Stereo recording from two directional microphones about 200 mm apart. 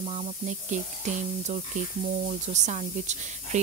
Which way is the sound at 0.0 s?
35° right (ahead or behind).